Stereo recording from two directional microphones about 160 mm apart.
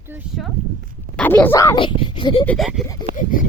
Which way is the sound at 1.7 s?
30° left (ahead or behind).